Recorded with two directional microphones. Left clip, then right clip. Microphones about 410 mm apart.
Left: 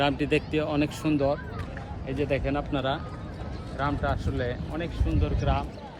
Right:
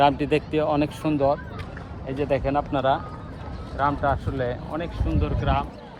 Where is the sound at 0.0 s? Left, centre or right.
Centre.